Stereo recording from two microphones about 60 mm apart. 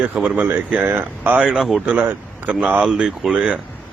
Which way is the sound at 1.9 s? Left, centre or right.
Right.